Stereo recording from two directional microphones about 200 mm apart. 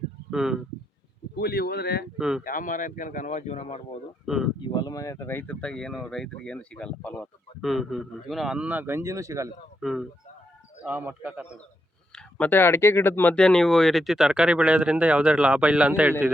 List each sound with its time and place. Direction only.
0.3 s speech: centre (ahead or behind)
1.4 s speech: 50° left (ahead or behind)
2.1 s speech: 5° right (ahead or behind)
2.4 s a man's voice: 45° left (ahead or behind)
4.3 s speech: centre (ahead or behind)
4.6 s speech: 20° left (ahead or behind); by 9.5 s 15° right (ahead or behind)
9.8 s a man's voice: centre (ahead or behind)
12.1 s speech: 10° left (ahead or behind)